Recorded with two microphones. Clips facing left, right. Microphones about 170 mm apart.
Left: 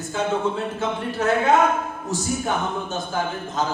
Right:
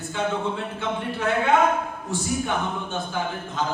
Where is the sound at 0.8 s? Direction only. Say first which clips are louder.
Left 2 dB; 40° left (ahead or behind).